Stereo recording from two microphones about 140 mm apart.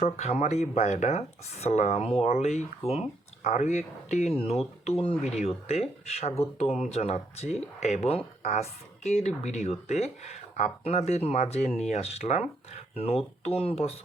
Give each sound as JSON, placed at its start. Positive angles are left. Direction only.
{"t": 0.0, "sound": "speech", "side_deg": 50}